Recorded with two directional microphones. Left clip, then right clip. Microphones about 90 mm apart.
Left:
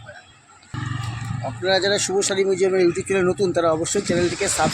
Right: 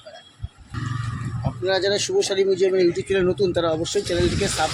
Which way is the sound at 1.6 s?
30° left (ahead or behind).